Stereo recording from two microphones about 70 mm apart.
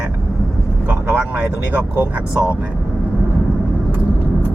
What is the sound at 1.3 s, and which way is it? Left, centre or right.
Speech, right.